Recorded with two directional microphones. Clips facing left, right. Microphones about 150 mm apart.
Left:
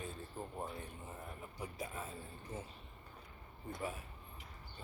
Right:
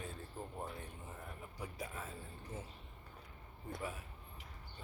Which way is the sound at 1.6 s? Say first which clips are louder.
Left 1 dB; 20° left (ahead or behind).